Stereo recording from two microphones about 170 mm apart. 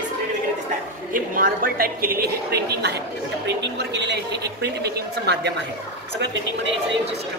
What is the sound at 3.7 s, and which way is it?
Speech, 90° right.